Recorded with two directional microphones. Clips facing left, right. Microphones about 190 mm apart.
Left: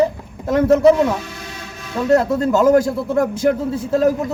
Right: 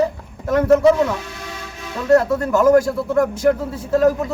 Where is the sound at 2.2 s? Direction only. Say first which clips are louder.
Left 1 dB; 25° left (ahead or behind).